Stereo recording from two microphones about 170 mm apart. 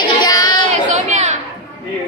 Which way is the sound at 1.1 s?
40° right (ahead or behind).